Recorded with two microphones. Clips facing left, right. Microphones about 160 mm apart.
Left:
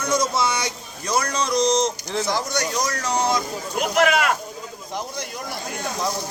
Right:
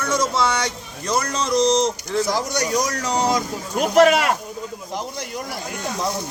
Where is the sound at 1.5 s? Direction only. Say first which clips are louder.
Right 2 dB; 30° right (ahead or behind).